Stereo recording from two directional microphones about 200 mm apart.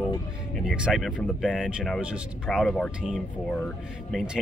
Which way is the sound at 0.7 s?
Centre (ahead or behind).